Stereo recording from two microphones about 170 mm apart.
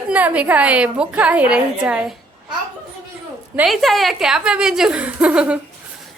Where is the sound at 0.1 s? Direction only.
10° right (ahead or behind).